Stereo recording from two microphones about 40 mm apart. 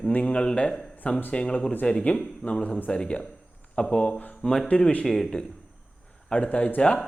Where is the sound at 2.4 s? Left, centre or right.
Left.